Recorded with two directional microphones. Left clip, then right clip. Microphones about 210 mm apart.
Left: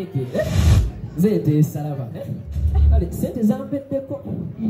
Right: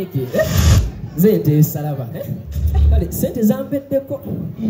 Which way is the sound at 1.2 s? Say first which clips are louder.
Right 5 dB; 50° right (ahead or behind).